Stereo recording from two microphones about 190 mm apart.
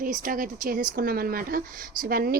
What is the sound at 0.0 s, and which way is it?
Speech, 45° right (ahead or behind).